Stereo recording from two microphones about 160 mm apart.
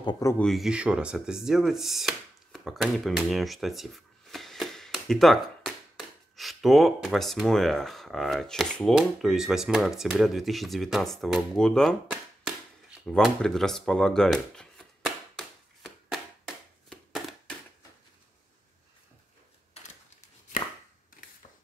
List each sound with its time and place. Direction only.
0.0 s speech: 30° left (ahead or behind)
0.4 s speech: centre (ahead or behind)
13.0 s a sound: 5° left (ahead or behind)
20.5 s chopping: 60° left (ahead or behind)